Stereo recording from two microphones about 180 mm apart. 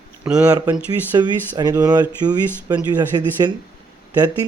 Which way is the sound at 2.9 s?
10° right (ahead or behind).